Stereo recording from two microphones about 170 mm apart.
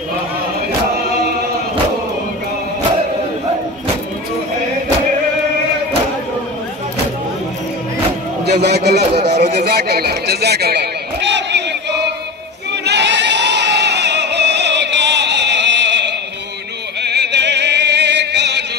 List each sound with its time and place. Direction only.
8.5 s a man's voice: 75° right (ahead or behind)
9.1 s speech: 40° right (ahead or behind)
9.6 s a sound: 65° right (ahead or behind); by 12.1 s 90° right
12.8 s singing: 90° right
17.0 s music: 85° right